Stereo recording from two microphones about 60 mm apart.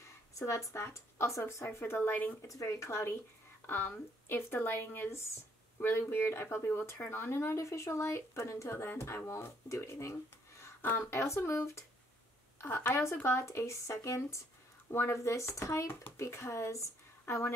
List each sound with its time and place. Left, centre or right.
0.7 s speech: left
2.4 s speech: left
3.6 s speech: left
7.5 s speech: left
10.8 s speech: left
11.1 s speech: left
12.5 s a sound: left
12.9 s speech: left
14.9 s speech: left